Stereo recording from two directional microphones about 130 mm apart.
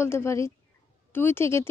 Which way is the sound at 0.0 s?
20° left (ahead or behind).